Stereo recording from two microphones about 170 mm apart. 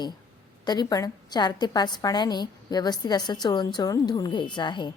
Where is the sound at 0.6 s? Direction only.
25° left (ahead or behind).